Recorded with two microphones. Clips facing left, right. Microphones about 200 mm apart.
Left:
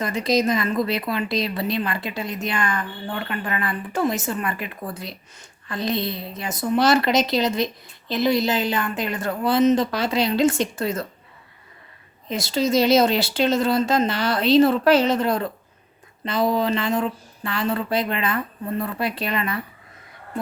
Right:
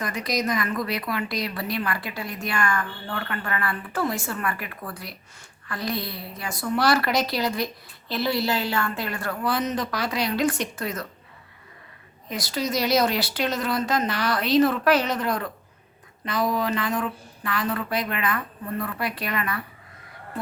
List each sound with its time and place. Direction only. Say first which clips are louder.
0.0 s a woman's voice: left 6 dB; 25° left (ahead or behind)
12.3 s a woman's voice: left 6 dB; 25° left (ahead or behind)